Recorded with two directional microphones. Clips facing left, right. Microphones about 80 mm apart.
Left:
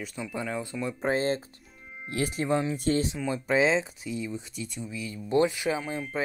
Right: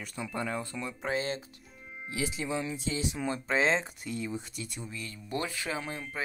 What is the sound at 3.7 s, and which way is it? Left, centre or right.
Speech, centre.